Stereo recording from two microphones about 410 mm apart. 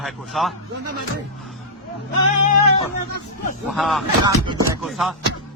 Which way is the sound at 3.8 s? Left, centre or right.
Centre.